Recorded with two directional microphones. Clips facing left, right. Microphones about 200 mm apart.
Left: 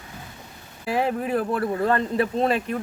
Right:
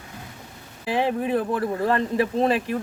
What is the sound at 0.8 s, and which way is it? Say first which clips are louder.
Speech: right 1 dB; 20° right (ahead or behind).